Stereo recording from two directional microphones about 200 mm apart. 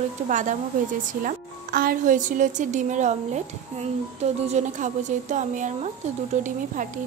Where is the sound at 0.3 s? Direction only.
40° right (ahead or behind).